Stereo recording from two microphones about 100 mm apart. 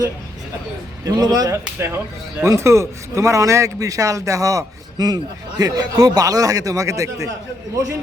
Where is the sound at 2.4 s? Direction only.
30° right (ahead or behind).